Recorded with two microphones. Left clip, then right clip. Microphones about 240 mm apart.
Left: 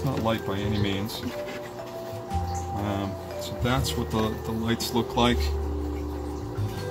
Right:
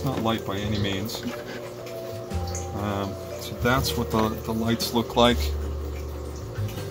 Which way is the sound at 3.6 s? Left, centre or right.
Centre.